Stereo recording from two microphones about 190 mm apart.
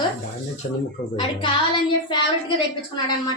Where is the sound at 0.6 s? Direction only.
45° left (ahead or behind).